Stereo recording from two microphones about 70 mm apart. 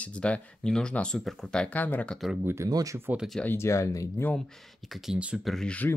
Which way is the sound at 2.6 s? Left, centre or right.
Right.